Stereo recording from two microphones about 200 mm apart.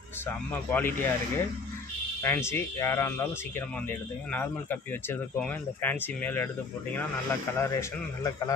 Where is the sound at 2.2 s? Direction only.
10° left (ahead or behind).